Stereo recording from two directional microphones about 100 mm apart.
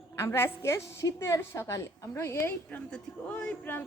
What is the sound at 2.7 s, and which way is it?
Speech, 15° left (ahead or behind).